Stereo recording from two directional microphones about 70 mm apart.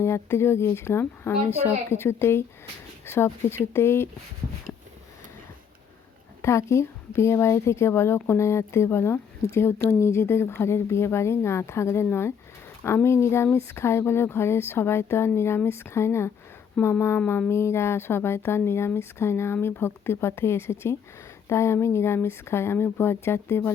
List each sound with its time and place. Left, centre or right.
0.0 s speech: left
6.4 s speech: left
16.8 s speech: centre
17.5 s speech: left